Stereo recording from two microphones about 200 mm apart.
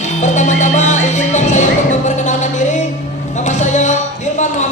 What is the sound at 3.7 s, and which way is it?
Music, 35° left (ahead or behind).